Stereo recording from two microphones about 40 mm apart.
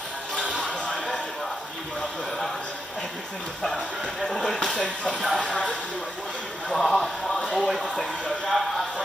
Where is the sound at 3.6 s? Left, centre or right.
Centre.